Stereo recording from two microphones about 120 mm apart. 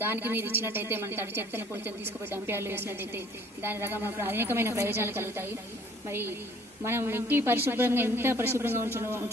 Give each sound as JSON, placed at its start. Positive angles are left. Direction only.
{"t": 0.0, "sound": "a woman's voice", "side_deg": -20}